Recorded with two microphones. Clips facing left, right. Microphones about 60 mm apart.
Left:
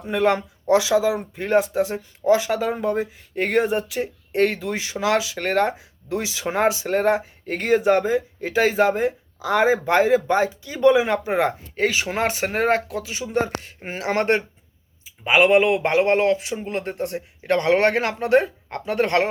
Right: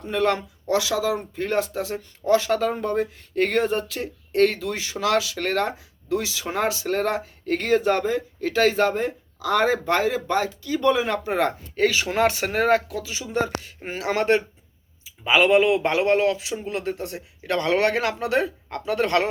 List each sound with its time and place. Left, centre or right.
0.0 s speech: centre
10.0 s speech: left
15.4 s speech: left